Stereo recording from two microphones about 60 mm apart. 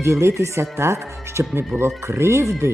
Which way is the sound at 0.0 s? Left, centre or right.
Right.